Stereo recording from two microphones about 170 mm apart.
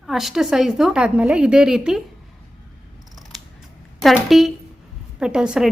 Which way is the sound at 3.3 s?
Centre (ahead or behind).